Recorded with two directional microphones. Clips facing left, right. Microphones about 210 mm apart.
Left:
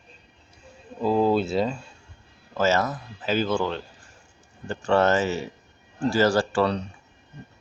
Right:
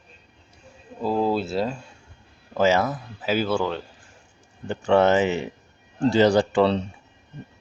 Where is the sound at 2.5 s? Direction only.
15° right (ahead or behind).